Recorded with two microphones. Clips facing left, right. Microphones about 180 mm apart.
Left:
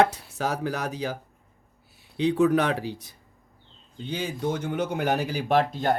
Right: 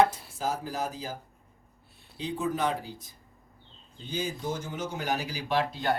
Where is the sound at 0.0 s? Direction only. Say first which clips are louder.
Left 2 dB; 75° left (ahead or behind).